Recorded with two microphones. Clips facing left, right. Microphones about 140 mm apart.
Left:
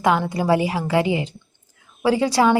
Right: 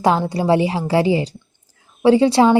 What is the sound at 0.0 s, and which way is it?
A woman's voice, 30° right (ahead or behind).